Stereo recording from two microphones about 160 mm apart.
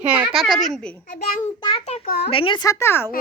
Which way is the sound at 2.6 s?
20° left (ahead or behind).